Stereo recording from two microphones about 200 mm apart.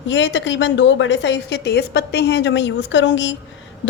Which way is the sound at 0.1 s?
65° left (ahead or behind).